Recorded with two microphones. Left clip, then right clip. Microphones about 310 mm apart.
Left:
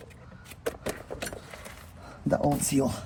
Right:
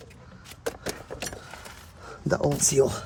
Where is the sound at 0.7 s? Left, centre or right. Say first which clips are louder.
Even; centre.